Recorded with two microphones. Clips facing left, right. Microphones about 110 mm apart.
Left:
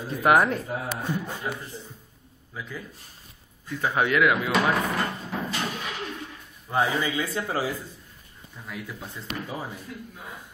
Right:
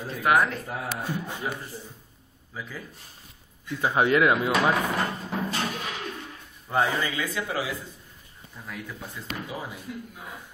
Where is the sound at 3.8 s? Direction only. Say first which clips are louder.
Right 1 dB; 25° right (ahead or behind).